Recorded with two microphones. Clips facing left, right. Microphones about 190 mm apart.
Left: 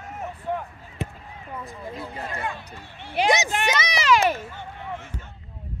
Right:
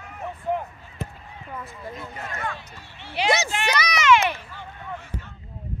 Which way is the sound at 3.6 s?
25° left (ahead or behind).